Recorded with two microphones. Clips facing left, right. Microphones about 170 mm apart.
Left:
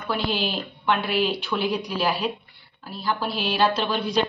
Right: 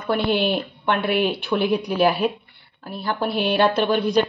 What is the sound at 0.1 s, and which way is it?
A woman's voice, 60° right (ahead or behind).